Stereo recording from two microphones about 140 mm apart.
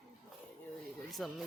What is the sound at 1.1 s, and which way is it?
Speech, centre (ahead or behind).